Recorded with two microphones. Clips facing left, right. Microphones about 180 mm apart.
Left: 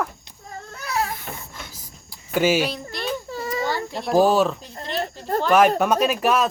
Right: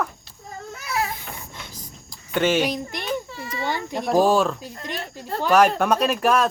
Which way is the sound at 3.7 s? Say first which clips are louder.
Even; 15° right (ahead or behind).